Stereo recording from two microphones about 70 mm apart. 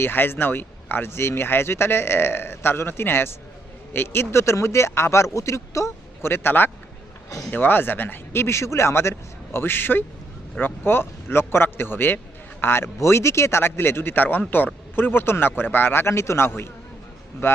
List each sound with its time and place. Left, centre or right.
0.0 s speech: left
6.3 s speech: left